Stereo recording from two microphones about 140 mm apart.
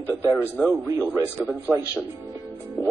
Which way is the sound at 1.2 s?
15° left (ahead or behind).